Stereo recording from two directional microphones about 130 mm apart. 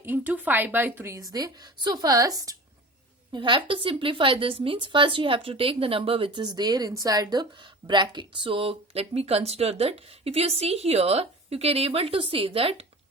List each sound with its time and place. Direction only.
0.0 s a woman's voice: 15° right (ahead or behind)
3.3 s a woman's voice: 40° right (ahead or behind)